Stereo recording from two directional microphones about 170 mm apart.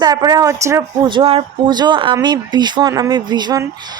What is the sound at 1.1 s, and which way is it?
A woman's voice, 30° right (ahead or behind).